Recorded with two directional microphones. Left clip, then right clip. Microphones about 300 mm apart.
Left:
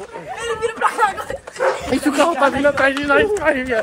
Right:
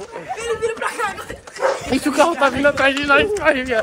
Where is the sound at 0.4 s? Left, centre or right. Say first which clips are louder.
Left 3 dB; centre.